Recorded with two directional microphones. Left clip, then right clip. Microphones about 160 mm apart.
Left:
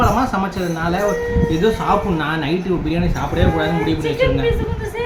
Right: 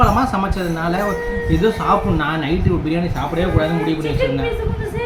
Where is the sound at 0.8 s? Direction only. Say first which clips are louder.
Left 2 dB; 10° right (ahead or behind).